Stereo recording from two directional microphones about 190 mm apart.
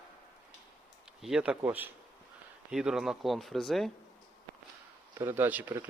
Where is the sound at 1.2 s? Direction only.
5° right (ahead or behind).